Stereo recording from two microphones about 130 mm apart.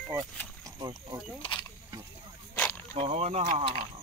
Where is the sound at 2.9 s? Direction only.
50° right (ahead or behind).